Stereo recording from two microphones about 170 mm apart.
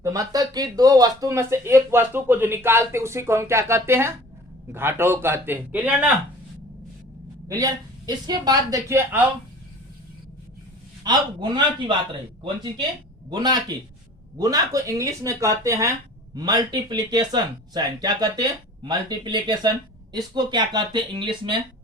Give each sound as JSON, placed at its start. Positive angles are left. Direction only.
{"t": 0.0, "sound": "speech", "side_deg": -20}
{"t": 7.4, "sound": "speech", "side_deg": -20}
{"t": 11.0, "sound": "speech", "side_deg": -25}
{"t": 13.3, "sound": "speech", "side_deg": -25}